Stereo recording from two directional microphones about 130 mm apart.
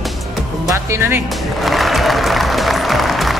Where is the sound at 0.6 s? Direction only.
20° right (ahead or behind).